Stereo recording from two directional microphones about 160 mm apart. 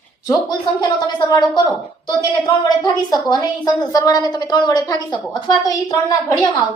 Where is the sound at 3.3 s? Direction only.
25° left (ahead or behind).